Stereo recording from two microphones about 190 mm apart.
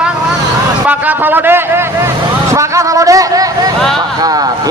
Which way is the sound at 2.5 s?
15° right (ahead or behind).